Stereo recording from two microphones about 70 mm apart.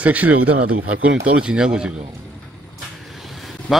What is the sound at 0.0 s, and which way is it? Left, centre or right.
Speech, right.